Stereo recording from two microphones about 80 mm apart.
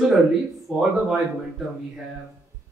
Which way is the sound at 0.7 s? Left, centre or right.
Centre.